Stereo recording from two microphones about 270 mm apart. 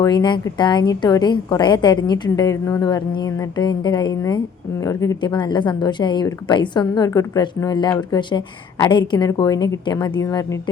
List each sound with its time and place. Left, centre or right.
0.0 s a woman's voice: centre